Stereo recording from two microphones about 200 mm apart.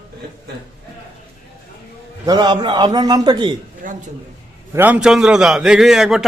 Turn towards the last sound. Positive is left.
turn(degrees=0)  # may be behind; listen again after turning